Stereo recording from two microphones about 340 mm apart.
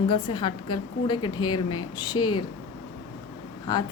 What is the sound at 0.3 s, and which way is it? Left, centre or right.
Speech, centre.